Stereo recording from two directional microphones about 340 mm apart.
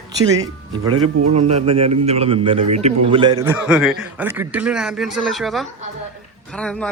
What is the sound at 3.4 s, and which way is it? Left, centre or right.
Speech, centre.